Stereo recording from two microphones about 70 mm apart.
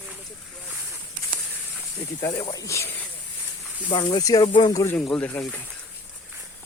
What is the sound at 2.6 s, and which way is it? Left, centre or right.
Speech, left.